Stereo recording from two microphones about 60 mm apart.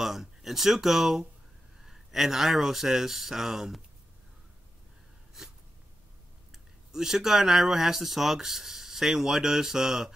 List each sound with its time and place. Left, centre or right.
0.0 s speech: centre
5.4 s a sound: centre
6.5 s speech: centre